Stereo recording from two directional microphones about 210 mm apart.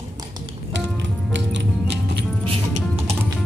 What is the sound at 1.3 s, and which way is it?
Music, 55° right (ahead or behind).